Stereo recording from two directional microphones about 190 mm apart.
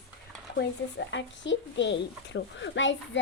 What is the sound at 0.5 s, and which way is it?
Speech, 70° left (ahead or behind).